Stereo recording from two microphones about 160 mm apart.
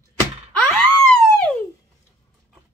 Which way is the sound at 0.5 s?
5° left (ahead or behind).